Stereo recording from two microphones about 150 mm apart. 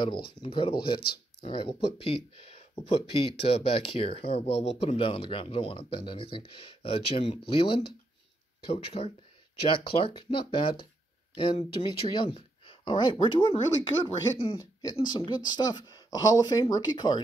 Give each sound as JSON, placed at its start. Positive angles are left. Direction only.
{"t": 0.4, "sound": "speech", "side_deg": 35}
{"t": 11.8, "sound": "speech", "side_deg": 30}
{"t": 14.6, "sound": "speech", "side_deg": 25}